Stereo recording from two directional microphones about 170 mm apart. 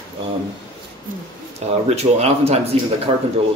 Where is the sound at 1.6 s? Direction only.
40° right (ahead or behind).